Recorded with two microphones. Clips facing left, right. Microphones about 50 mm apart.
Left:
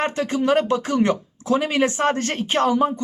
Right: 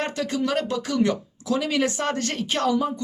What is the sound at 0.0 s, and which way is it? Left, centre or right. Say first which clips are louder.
Speech: left 4 dB; left.